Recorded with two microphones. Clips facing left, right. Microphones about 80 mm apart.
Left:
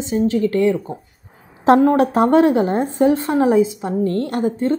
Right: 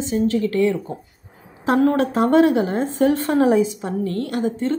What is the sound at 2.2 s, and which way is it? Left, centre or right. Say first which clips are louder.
A woman's voice: even; left.